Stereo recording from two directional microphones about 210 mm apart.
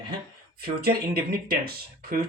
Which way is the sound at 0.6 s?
45° right (ahead or behind).